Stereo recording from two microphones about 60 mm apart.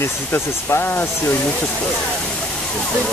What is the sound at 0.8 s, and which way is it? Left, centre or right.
Speech, left.